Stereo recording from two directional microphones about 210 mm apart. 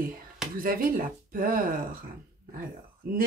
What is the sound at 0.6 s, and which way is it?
Speech, 45° right (ahead or behind).